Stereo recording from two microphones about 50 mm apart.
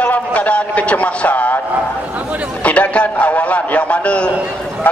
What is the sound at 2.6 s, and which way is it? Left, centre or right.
A man's voice, left.